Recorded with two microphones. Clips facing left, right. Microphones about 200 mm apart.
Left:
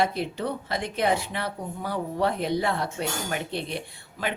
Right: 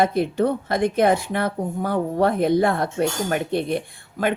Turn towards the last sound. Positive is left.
turn(degrees=-50)  # may be behind; listen again after turning